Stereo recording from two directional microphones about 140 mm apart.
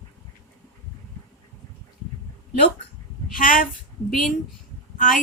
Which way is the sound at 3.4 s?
80° left.